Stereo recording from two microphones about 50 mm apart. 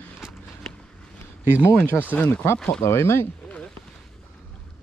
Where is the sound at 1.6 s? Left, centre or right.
Left.